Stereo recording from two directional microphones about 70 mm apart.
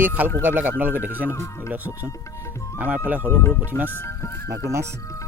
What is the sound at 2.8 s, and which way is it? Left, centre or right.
Speech, right.